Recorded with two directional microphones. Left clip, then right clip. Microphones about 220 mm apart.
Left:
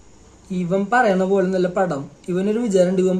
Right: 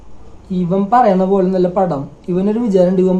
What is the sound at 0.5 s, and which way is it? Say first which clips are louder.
A man's voice: right 5 dB; centre (ahead or behind).